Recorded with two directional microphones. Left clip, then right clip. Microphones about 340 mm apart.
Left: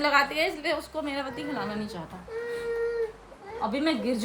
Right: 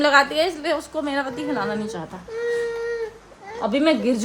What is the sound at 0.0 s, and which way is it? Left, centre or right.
Speech, centre.